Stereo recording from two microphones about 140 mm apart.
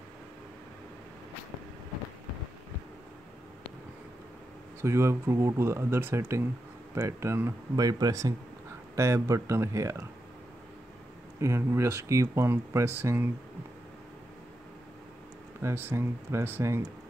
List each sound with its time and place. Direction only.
4.8 s speech: 20° right (ahead or behind)
11.4 s speech: 20° right (ahead or behind)
15.6 s speech: 15° right (ahead or behind)